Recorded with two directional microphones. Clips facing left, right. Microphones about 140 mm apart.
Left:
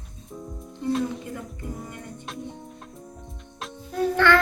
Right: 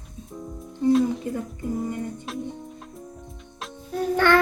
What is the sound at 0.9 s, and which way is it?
Music, centre (ahead or behind).